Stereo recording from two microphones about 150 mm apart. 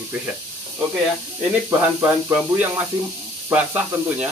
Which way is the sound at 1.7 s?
20° right (ahead or behind).